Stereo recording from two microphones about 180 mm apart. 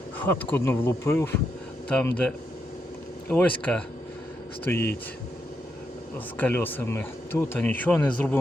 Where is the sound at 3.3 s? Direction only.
10° left (ahead or behind).